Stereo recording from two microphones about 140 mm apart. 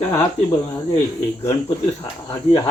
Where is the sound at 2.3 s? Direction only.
40° left (ahead or behind).